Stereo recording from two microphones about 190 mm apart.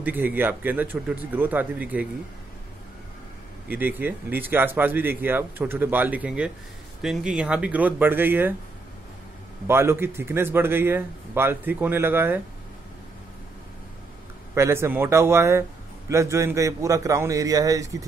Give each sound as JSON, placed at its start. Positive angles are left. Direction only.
{"t": 0.0, "sound": "speech", "side_deg": -10}
{"t": 3.6, "sound": "speech", "side_deg": -10}
{"t": 9.7, "sound": "speech", "side_deg": -15}
{"t": 14.5, "sound": "speech", "side_deg": -15}